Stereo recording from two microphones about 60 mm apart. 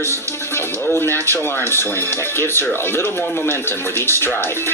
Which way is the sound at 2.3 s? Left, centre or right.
Left.